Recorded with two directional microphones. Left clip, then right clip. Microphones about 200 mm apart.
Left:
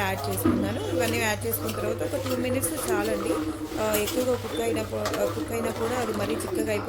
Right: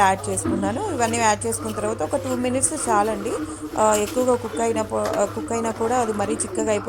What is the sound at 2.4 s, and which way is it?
Speech, 25° right (ahead or behind).